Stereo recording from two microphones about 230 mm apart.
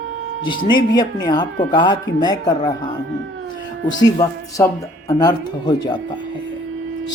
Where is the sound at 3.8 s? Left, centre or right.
Centre.